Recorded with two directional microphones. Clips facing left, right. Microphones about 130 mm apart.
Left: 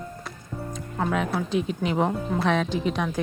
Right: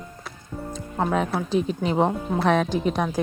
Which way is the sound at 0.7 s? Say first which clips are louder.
Right 3 dB; 35° right (ahead or behind).